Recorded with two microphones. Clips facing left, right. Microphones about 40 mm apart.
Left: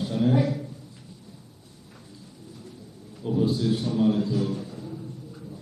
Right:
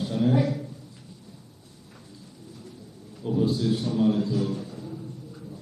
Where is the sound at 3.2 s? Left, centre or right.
Centre.